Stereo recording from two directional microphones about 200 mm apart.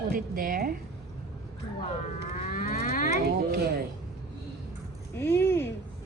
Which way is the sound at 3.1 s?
50° right (ahead or behind).